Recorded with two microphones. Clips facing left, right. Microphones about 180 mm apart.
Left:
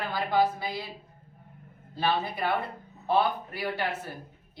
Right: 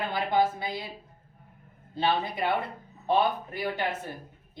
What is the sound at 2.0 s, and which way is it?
Speech, 20° right (ahead or behind).